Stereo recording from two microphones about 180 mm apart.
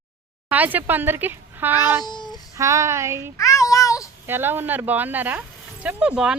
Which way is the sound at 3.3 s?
15° left (ahead or behind).